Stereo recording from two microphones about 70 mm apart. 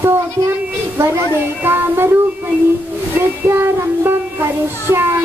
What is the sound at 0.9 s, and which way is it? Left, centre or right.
Speech, right.